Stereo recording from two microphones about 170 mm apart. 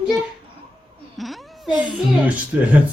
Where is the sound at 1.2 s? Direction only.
Centre (ahead or behind).